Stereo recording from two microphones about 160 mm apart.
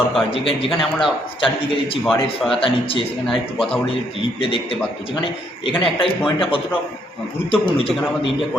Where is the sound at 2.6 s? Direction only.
35° left (ahead or behind).